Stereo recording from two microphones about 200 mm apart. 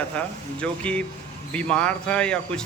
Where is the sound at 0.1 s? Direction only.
5° left (ahead or behind).